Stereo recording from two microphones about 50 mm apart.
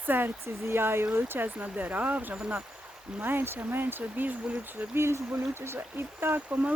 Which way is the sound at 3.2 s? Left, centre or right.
Right.